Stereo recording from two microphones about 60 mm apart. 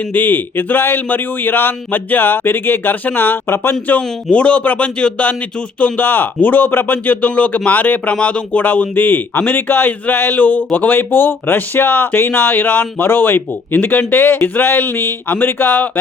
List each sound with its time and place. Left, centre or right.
0.1 s speech: left
5.8 s speech: left